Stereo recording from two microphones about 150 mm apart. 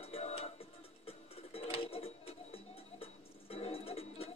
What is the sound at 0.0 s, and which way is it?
Music, 45° left (ahead or behind).